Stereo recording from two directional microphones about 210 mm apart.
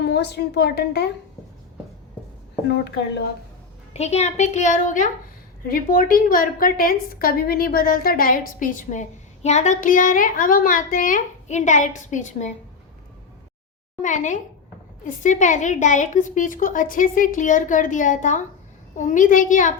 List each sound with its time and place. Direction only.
0.0 s a woman's voice: 50° left (ahead or behind)
2.6 s a woman's voice: 55° left (ahead or behind)
3.9 s a woman's voice: 30° left (ahead or behind)
14.0 s a woman's voice: 35° left (ahead or behind)